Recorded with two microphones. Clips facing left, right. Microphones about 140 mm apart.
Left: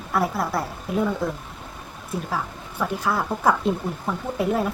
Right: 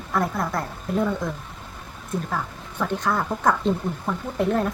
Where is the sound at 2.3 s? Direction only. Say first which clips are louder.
Left 1 dB; 5° left (ahead or behind).